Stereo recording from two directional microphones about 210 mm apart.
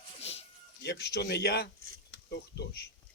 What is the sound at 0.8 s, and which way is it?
Speech, 50° left (ahead or behind).